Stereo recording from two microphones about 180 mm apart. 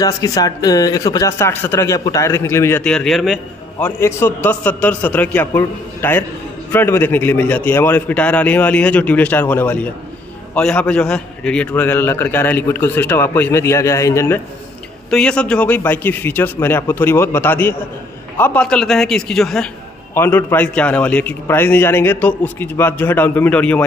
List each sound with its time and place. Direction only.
0.0 s a man's voice: 20° left (ahead or behind); by 3.3 s centre (ahead or behind)
3.8 s a man's voice: 10° left (ahead or behind)